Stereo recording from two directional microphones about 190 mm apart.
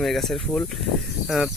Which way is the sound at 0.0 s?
Centre (ahead or behind).